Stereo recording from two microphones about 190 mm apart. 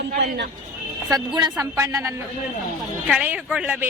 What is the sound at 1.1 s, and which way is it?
A woman's voice, 20° right (ahead or behind).